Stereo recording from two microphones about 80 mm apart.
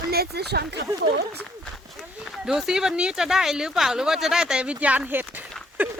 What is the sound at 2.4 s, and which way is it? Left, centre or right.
Speech, centre.